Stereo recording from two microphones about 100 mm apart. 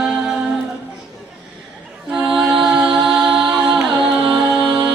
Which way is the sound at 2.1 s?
5° right (ahead or behind).